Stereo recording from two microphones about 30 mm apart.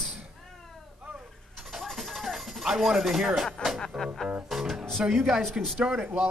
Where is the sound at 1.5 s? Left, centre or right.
Centre.